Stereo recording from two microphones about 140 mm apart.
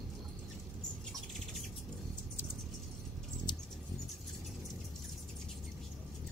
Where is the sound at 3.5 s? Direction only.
35° left (ahead or behind).